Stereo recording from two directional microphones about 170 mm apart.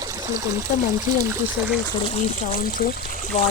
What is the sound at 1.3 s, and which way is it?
Speech, 5° right (ahead or behind).